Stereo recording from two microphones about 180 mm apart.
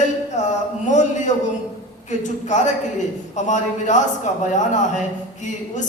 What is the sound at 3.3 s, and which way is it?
Speech, 40° left (ahead or behind).